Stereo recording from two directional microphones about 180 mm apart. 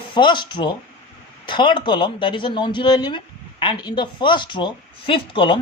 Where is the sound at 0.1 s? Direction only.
25° left (ahead or behind).